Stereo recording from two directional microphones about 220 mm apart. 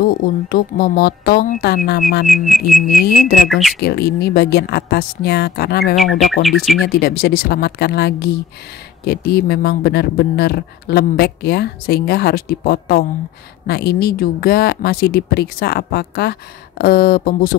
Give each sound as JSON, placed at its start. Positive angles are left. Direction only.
{"t": 0.0, "sound": "speech", "side_deg": 40}
{"t": 2.2, "sound": "speech", "side_deg": 0}
{"t": 3.1, "sound": "speech", "side_deg": 40}
{"t": 3.4, "sound": "speech", "side_deg": 0}
{"t": 3.8, "sound": "speech", "side_deg": 45}
{"t": 5.9, "sound": "speech", "side_deg": 0}
{"t": 6.8, "sound": "speech", "side_deg": 45}